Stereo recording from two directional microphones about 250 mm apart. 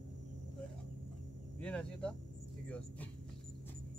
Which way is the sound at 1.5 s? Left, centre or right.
Centre.